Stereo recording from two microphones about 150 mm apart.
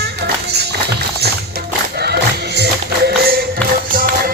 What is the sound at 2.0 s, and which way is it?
Music, 90° right.